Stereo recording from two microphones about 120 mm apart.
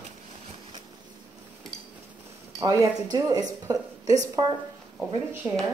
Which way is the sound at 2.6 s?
30° right (ahead or behind).